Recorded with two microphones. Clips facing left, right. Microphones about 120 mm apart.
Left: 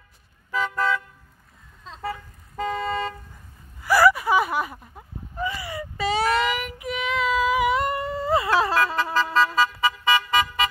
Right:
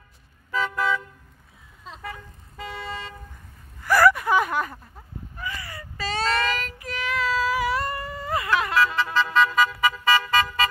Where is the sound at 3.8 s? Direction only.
5° left (ahead or behind).